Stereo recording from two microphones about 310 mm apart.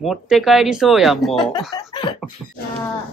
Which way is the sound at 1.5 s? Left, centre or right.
Centre.